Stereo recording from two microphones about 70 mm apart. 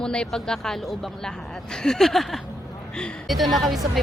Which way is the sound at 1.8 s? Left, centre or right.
Centre.